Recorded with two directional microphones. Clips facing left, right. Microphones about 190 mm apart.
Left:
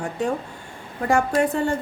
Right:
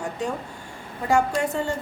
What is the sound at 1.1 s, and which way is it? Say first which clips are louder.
Speech: left 2 dB; 55° left (ahead or behind).